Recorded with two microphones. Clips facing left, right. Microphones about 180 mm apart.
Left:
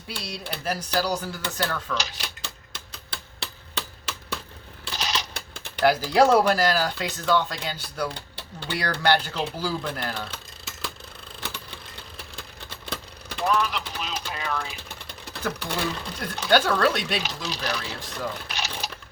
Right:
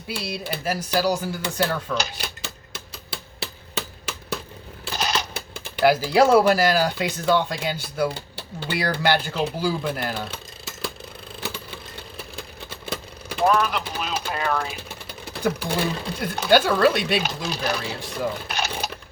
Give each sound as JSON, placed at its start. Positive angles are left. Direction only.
{"t": 0.1, "sound": "speech", "side_deg": -5}
{"t": 2.0, "sound": "speech", "side_deg": -50}
{"t": 2.4, "sound": "a sound", "side_deg": -5}
{"t": 4.9, "sound": "a sound", "side_deg": -50}
{"t": 5.8, "sound": "speech", "side_deg": -10}
{"t": 11.3, "sound": "vehicle", "side_deg": -5}
{"t": 13.4, "sound": "vehicle", "side_deg": -50}
{"t": 14.8, "sound": "speech", "side_deg": -5}
{"t": 17.2, "sound": "speech", "side_deg": -50}
{"t": 18.0, "sound": "speech", "side_deg": -10}
{"t": 18.4, "sound": "sewing machine", "side_deg": -50}